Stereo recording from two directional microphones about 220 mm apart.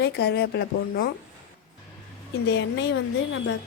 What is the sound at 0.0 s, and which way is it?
Speech, 45° left (ahead or behind).